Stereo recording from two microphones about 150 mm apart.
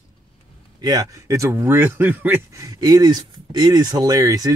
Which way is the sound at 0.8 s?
25° right (ahead or behind).